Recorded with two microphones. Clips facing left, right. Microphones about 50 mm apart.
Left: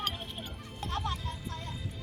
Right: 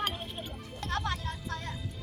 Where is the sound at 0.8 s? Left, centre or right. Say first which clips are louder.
Right 2 dB; right.